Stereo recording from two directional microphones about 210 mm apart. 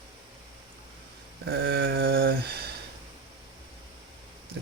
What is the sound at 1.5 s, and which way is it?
Mantra, 45° right (ahead or behind).